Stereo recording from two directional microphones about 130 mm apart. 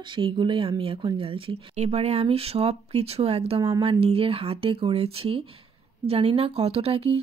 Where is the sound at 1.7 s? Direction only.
55° right (ahead or behind).